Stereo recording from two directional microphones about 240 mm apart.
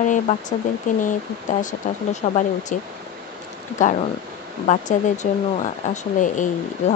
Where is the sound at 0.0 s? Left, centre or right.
Left.